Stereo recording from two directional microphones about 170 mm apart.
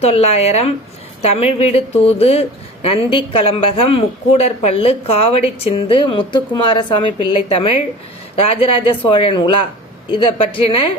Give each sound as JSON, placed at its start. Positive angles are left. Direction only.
{"t": 0.0, "sound": "a woman's voice", "side_deg": 40}